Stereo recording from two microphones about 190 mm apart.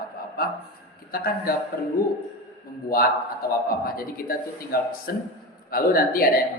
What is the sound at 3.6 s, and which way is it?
A man's voice, 50° left (ahead or behind).